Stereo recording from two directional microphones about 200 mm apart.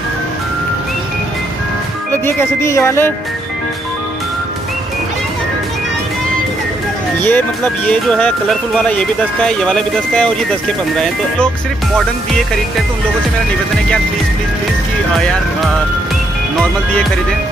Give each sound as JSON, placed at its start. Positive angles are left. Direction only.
{"t": 2.2, "sound": "speech", "side_deg": 15}
{"t": 7.2, "sound": "speech", "side_deg": 10}